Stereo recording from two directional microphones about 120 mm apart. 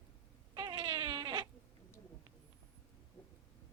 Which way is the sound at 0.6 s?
40° right (ahead or behind).